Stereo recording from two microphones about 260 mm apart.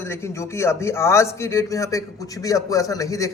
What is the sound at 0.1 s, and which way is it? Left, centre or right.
A man's voice, centre.